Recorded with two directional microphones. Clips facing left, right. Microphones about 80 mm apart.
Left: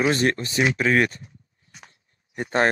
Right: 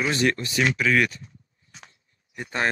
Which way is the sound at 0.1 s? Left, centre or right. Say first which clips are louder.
Left 1 dB; left.